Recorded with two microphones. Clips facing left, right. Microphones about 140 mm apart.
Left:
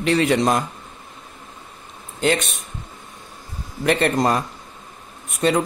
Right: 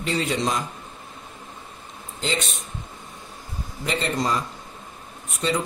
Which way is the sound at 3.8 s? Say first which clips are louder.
Left 7 dB; 60° left (ahead or behind).